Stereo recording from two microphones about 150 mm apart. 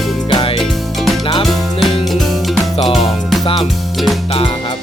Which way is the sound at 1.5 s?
Centre (ahead or behind).